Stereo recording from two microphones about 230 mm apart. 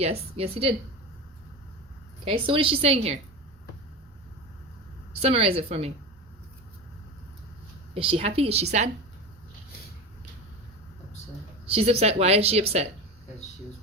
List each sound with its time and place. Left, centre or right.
0.0 s a woman's voice: right
2.2 s a woman's voice: right
5.2 s a woman's voice: right
7.9 s a woman's voice: right
11.6 s a woman's voice: right